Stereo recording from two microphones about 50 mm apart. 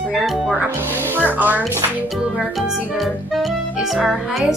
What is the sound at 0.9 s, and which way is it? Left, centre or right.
Speech, right.